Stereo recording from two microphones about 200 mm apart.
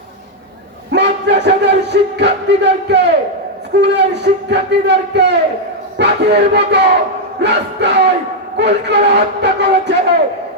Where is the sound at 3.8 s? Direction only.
55° right (ahead or behind).